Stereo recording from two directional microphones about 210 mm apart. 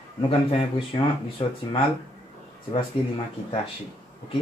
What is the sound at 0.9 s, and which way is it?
Speech, 25° left (ahead or behind).